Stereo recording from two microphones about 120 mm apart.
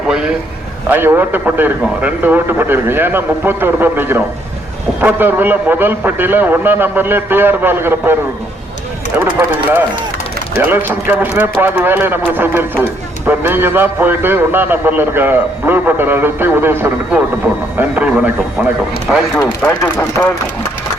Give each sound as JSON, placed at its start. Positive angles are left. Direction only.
{"t": 0.1, "sound": "a man's voice", "side_deg": -5}
{"t": 9.1, "sound": "a man's voice", "side_deg": -15}